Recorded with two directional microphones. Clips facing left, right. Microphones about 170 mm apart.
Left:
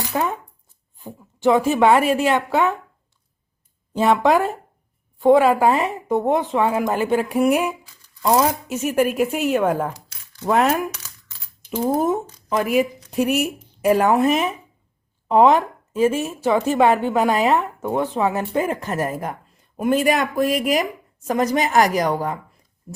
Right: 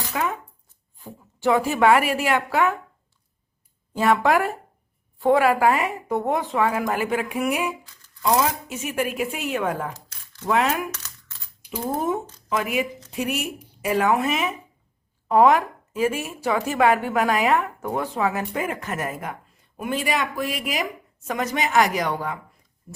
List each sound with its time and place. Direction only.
0.1 s shuffling cards: 30° left (ahead or behind)
0.9 s a woman's voice: 20° left (ahead or behind)
3.9 s a woman's voice: 20° left (ahead or behind); by 10.8 s 40° left (ahead or behind)
10.9 s a sound: 15° left (ahead or behind)
11.6 s a sound: 10° right (ahead or behind)
12.5 s a woman's voice: 35° left (ahead or behind)
15.3 s a woman's voice: 25° left (ahead or behind)